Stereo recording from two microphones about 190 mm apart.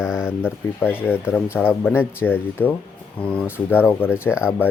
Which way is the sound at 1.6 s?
5° right (ahead or behind).